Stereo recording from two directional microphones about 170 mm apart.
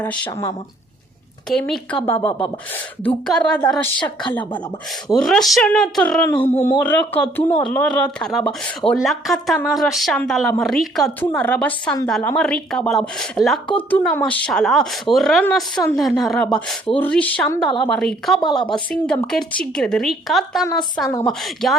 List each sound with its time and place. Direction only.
0.0 s a woman's voice: 15° left (ahead or behind)
1.5 s a woman's voice: 5° left (ahead or behind)
18.3 s a woman's voice: 30° left (ahead or behind)
18.7 s a woman's voice: 5° left (ahead or behind)